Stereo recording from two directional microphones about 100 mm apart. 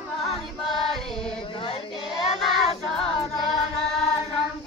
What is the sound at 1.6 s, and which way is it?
Child singing, 70° left (ahead or behind).